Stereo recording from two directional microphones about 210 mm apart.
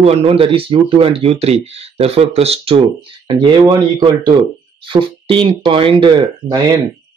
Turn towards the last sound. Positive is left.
turn(degrees=-20)  # may be behind; listen again after turning